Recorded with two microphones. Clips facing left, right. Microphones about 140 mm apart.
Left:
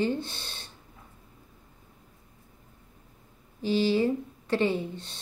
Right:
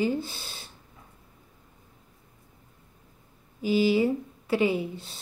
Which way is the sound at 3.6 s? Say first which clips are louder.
Right 2 dB; 10° right (ahead or behind).